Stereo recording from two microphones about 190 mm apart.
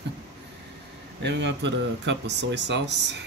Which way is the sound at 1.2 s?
65° right (ahead or behind).